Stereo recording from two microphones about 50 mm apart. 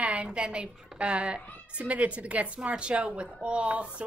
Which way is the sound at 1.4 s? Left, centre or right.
Left.